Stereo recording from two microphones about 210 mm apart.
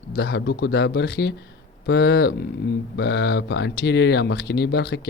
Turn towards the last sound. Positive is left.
turn(degrees=50)  # may be behind; listen again after turning